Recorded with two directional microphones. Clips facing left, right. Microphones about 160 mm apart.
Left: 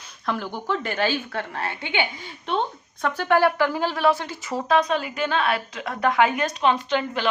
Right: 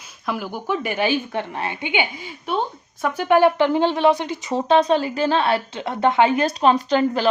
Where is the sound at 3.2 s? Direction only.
20° right (ahead or behind).